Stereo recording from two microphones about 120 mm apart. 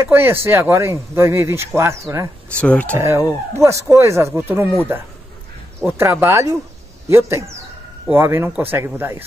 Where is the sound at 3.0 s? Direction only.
25° right (ahead or behind).